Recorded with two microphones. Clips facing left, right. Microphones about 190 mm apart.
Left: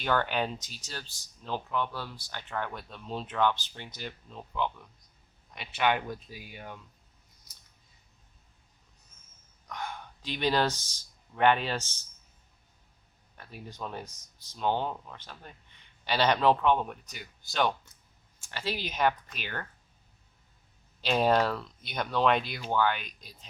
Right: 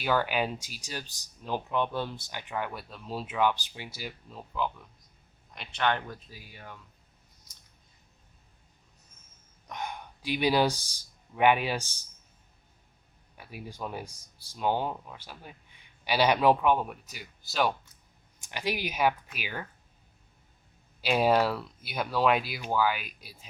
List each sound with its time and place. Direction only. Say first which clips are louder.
0.0 s speech: right 1 dB; 5° right (ahead or behind)
5.5 s speech: left 1 dB; 10° left (ahead or behind)
9.6 s speech: right 1 dB; 20° right (ahead or behind)
13.3 s speech: right 2 dB; 10° right (ahead or behind)
18.3 s speech: right 2 dB; 15° right (ahead or behind)
21.0 s speech: right 1 dB; 10° right (ahead or behind)